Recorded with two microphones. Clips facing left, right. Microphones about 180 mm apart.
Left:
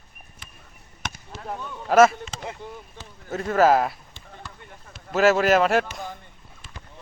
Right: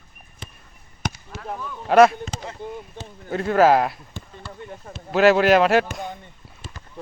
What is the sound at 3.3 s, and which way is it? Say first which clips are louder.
Speech: right 2 dB; centre (ahead or behind).